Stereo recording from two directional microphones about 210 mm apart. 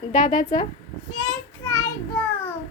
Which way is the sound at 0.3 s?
20° left (ahead or behind).